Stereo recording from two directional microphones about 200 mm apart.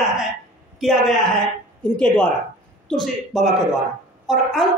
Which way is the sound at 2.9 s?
Centre (ahead or behind).